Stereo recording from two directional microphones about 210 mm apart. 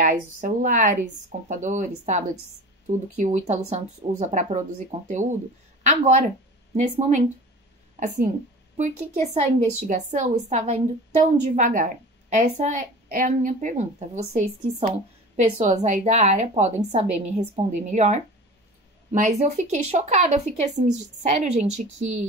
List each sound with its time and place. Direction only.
0.0 s speech: 40° right (ahead or behind)
8.7 s speech: 35° right (ahead or behind)